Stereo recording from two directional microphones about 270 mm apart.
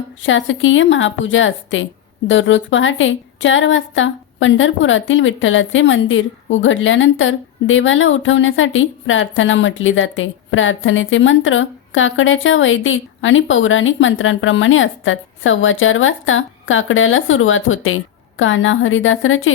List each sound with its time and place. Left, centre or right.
0.2 s a woman's voice: left